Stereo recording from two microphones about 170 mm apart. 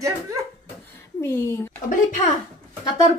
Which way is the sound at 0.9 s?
15° left (ahead or behind).